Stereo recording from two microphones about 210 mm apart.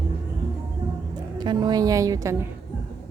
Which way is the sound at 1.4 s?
20° right (ahead or behind).